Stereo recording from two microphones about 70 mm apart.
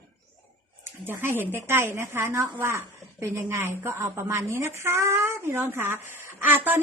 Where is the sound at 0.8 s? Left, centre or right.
Right.